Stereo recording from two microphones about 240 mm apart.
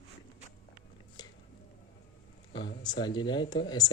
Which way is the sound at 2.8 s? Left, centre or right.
Centre.